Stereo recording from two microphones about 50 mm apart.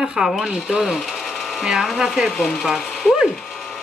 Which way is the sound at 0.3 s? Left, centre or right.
Centre.